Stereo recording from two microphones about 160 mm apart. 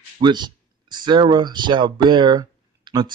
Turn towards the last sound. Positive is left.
turn(degrees=-30)  # may be behind; listen again after turning